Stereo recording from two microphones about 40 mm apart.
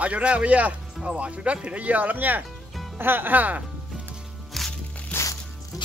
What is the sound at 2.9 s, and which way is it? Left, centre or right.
Speech, right.